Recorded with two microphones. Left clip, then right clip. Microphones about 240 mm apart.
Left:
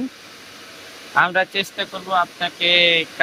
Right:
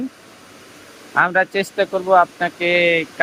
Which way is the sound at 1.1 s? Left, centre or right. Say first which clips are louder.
Right 1 dB; centre.